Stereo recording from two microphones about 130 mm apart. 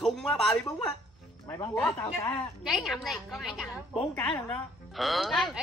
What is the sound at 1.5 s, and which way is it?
Speech, 20° left (ahead or behind).